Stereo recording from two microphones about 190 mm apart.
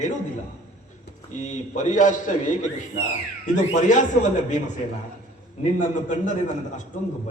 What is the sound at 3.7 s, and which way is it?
A man's voice, 40° left (ahead or behind).